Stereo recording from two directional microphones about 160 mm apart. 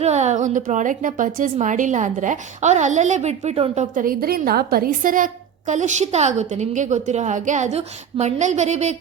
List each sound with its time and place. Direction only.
0.0 s a woman's voice: 45° right (ahead or behind)
3.9 s a woman's voice: 65° right (ahead or behind); by 9.0 s 45° right (ahead or behind)